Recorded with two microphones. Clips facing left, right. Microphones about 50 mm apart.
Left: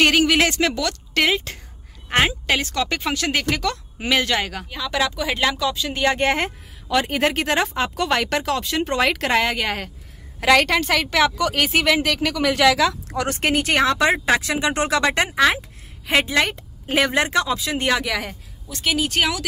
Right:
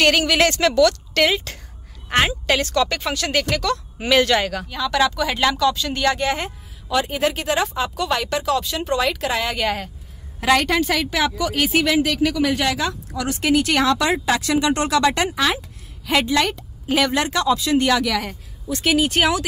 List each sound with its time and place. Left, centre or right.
0.0 s speech: centre
6.1 s speech: left
10.4 s a woman's voice: left
13.1 s speech: left
13.7 s speech: left
18.9 s speech: centre